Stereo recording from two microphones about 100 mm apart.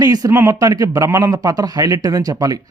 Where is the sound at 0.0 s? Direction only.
40° right (ahead or behind).